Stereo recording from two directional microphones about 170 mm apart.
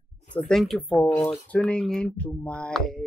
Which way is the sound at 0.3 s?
Centre (ahead or behind).